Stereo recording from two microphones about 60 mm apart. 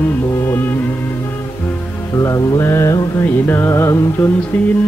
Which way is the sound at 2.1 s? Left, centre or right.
Left.